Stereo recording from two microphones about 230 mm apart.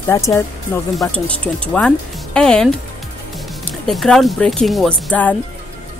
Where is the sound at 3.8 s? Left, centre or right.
Centre.